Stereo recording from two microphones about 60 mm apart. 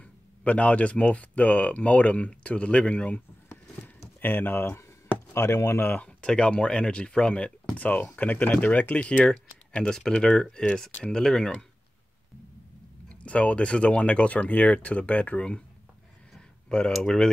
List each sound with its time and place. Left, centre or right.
0.4 s speech: left
3.4 s a sound: left
5.3 s speech: left
5.9 s speech: centre
7.7 s speech: left
9.2 s speech: centre
13.2 s speech: left
16.3 s a sound: centre